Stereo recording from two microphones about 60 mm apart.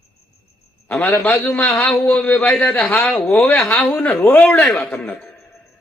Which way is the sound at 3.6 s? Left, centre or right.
Left.